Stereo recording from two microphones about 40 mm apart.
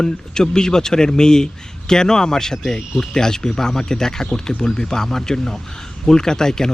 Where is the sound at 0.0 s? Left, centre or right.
Centre.